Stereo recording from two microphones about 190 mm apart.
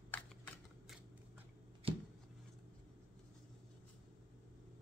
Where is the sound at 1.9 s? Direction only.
30° right (ahead or behind).